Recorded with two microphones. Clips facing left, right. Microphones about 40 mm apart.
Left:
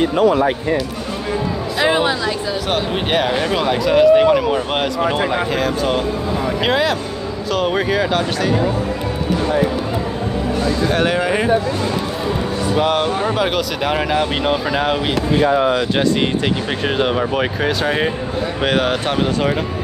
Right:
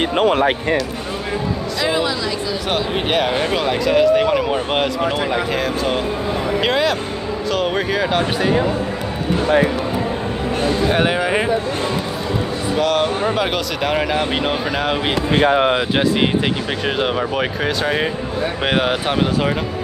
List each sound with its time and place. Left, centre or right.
0.0 s speech: right
1.8 s speech: left
2.7 s speech: centre
8.2 s speech: centre
10.9 s speech: centre
12.7 s speech: centre
13.2 s speech: centre
15.3 s speech: right
16.8 s speech: centre
18.6 s speech: centre